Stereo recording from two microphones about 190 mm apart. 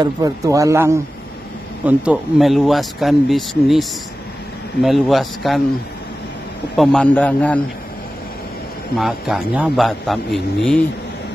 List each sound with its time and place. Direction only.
0.0 s speech: 20° right (ahead or behind)
1.9 s a man's voice: 5° right (ahead or behind)
4.8 s a man's voice: centre (ahead or behind)
6.8 s a man's voice: 5° left (ahead or behind)
8.9 s a man's voice: centre (ahead or behind)